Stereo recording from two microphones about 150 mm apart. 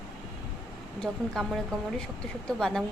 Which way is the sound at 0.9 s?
5° left (ahead or behind).